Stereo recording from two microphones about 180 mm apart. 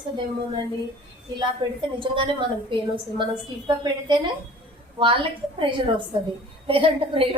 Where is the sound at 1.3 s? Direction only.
25° right (ahead or behind).